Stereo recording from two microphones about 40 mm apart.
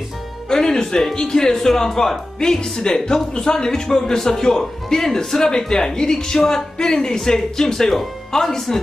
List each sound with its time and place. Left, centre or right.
0.5 s a man's voice: centre